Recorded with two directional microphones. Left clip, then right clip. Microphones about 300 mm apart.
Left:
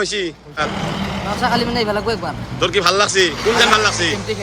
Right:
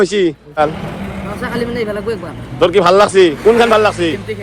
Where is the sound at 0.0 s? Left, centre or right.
Centre.